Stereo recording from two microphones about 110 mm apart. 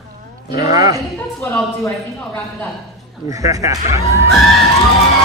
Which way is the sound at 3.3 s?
30° right (ahead or behind).